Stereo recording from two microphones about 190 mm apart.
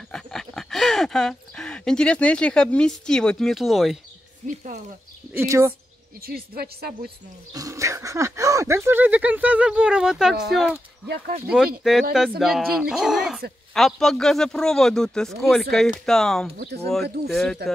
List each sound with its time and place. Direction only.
0.1 s speech: 5° left (ahead or behind)
4.4 s speech: 35° right (ahead or behind)
5.3 s speech: 15° right (ahead or behind)
6.2 s speech: 55° right (ahead or behind)
7.5 s speech: 15° right (ahead or behind); by 10.8 s centre (ahead or behind)
11.1 s speech: 50° right (ahead or behind)
11.4 s speech: centre (ahead or behind)